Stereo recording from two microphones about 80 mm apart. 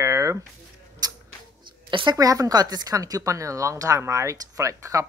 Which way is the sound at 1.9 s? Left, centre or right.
Right.